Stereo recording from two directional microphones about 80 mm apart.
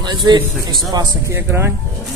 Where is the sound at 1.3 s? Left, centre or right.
Right.